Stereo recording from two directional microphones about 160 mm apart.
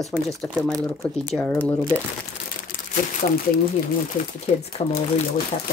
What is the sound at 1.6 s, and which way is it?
Speech, 10° left (ahead or behind).